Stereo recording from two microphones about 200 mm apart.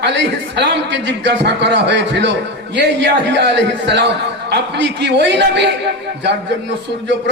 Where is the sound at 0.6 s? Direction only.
65° right (ahead or behind).